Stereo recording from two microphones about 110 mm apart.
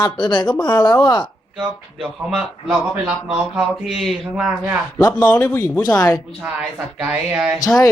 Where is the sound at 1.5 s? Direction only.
10° right (ahead or behind).